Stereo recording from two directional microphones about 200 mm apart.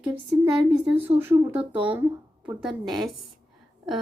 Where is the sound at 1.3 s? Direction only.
20° right (ahead or behind).